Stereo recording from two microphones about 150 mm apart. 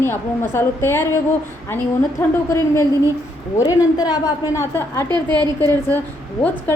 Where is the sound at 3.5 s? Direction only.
20° left (ahead or behind).